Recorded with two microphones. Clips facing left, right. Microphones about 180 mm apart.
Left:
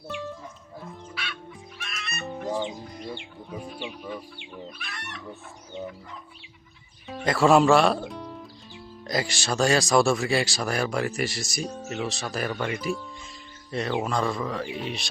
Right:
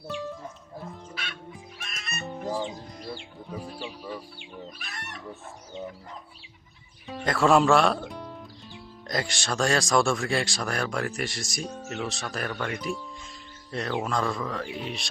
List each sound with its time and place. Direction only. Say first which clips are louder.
1.1 s music: left 1 dB; 45° right (ahead or behind)
2.2 s music: left 2 dB; centre (ahead or behind)
4.8 s chicken: left 1 dB; 40° right (ahead or behind)
7.1 s speech: left 2 dB; centre (ahead or behind)